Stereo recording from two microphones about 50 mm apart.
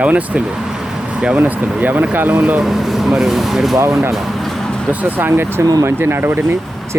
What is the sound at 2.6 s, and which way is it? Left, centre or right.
Speech, centre.